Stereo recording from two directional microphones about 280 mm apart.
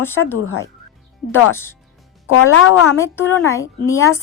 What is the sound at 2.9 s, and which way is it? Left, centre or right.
A woman's voice, centre.